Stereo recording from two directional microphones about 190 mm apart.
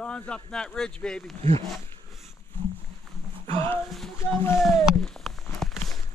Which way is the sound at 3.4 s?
30° right (ahead or behind).